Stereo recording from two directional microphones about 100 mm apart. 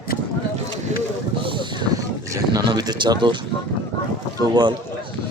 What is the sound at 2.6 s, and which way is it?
Speech, 45° right (ahead or behind).